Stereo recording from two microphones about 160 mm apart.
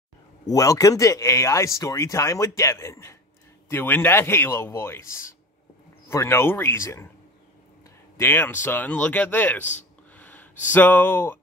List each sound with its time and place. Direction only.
0.5 s speech: 20° left (ahead or behind)
8.2 s speech: 15° left (ahead or behind)
10.1 s a sound: 10° left (ahead or behind)
10.7 s speech: 10° left (ahead or behind)